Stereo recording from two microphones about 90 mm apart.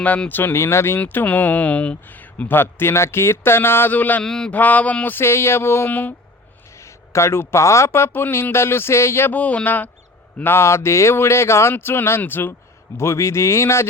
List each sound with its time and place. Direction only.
0.0 s speech: 15° left (ahead or behind)
4.2 s speech: 5° left (ahead or behind)
4.5 s speech: 15° left (ahead or behind)
6.8 s speech: 30° left (ahead or behind)
9.3 s speech: 15° left (ahead or behind)